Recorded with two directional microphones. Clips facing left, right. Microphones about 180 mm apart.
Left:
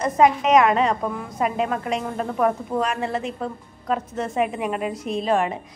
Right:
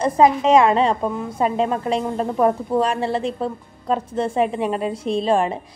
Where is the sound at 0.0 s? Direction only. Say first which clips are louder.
Right 2 dB; 30° right (ahead or behind).